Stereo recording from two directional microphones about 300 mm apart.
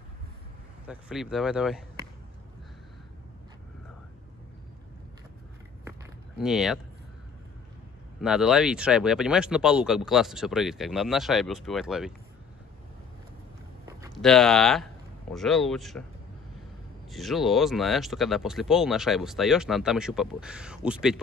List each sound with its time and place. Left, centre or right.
0.8 s speech: centre
5.9 s walk: centre
8.2 s speech: centre
14.1 s speech: centre
17.1 s speech: centre